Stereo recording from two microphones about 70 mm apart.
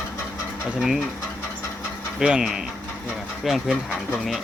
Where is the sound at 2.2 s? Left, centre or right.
Centre.